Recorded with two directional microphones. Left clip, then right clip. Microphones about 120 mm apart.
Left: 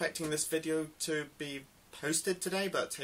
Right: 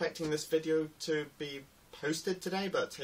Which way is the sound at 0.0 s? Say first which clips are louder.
Even; 5° left (ahead or behind).